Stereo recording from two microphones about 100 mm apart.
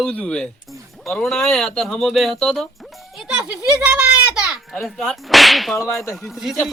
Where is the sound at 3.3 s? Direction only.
10° right (ahead or behind).